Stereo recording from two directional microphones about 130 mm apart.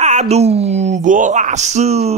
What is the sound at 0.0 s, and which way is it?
Speech, 60° right (ahead or behind).